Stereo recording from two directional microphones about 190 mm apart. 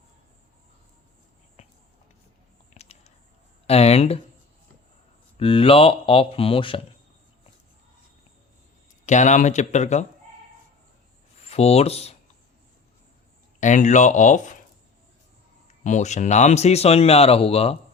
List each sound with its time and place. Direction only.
2.7 s a sound: 35° left (ahead or behind)
3.7 s speech: 35° left (ahead or behind)
5.4 s speech: 30° left (ahead or behind)
9.0 s speech: 40° left (ahead or behind)
11.3 s speech: 35° left (ahead or behind)
13.6 s speech: 40° left (ahead or behind)
15.6 s speech: 40° left (ahead or behind)